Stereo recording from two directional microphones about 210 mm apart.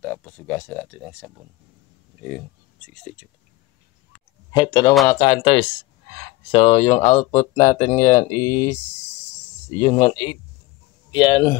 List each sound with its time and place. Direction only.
0.0 s speech: 5° left (ahead or behind)
2.9 s speech: 5° left (ahead or behind)
4.5 s speech: 20° left (ahead or behind)